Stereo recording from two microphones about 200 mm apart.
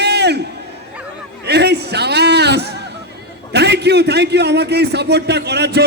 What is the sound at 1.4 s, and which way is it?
A man's voice, 55° right (ahead or behind).